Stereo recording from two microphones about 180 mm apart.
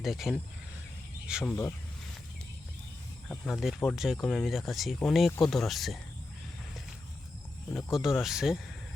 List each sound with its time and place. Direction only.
0.0 s speech: centre (ahead or behind)
1.5 s speech: 15° left (ahead or behind)
3.2 s speech: centre (ahead or behind)
7.7 s speech: centre (ahead or behind)